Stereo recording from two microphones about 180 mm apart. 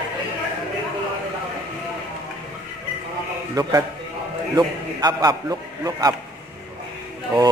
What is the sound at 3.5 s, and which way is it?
A man's voice, 20° right (ahead or behind).